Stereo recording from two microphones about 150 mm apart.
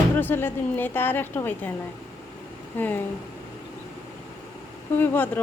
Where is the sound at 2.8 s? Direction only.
10° left (ahead or behind).